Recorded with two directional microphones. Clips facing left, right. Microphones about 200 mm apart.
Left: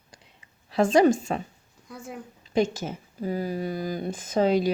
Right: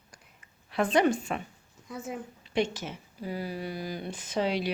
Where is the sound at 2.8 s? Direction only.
45° left (ahead or behind).